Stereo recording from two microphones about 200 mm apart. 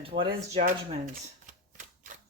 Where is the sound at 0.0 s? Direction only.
30° right (ahead or behind).